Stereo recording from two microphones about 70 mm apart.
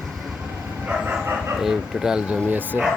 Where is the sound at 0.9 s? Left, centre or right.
Centre.